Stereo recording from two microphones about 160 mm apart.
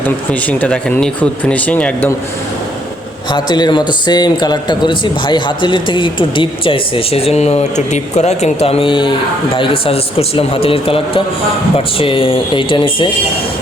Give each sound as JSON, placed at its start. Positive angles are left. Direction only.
{"t": 0.3, "sound": "speech", "side_deg": 10}
{"t": 3.3, "sound": "speech", "side_deg": 25}